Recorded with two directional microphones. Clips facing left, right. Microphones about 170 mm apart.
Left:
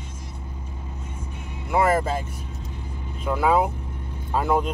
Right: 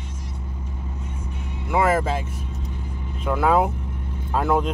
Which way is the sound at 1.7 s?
Centre (ahead or behind).